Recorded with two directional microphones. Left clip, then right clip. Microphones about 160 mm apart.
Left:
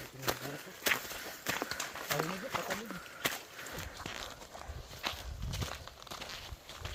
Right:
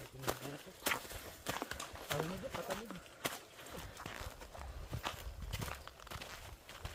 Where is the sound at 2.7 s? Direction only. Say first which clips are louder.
Left 4 dB; centre (ahead or behind).